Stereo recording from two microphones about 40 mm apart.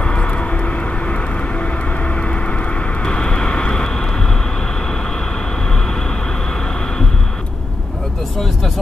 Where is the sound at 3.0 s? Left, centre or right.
Left.